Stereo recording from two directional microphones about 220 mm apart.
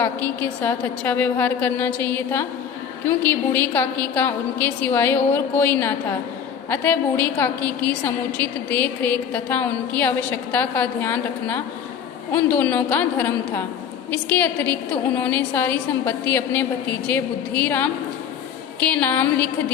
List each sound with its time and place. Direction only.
0.0 s a woman's voice: 5° left (ahead or behind)